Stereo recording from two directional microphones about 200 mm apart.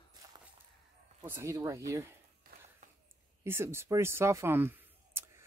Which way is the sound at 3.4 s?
10° right (ahead or behind).